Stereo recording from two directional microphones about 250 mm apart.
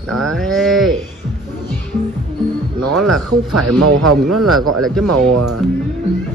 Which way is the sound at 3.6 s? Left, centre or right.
Right.